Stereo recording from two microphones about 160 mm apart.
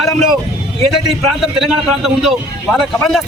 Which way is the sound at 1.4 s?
Centre (ahead or behind).